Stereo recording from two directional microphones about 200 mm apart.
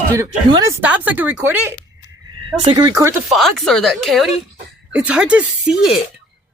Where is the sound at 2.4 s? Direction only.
25° right (ahead or behind).